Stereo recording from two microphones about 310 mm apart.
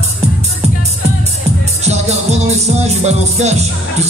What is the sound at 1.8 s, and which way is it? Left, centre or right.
Music, right.